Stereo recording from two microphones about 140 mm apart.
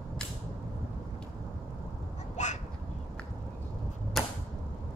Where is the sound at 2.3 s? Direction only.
55° left (ahead or behind).